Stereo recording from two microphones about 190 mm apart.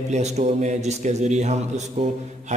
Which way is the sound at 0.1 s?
35° right (ahead or behind).